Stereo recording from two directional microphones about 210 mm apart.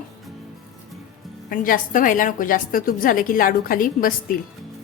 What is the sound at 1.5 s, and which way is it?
A woman's voice, 40° left (ahead or behind).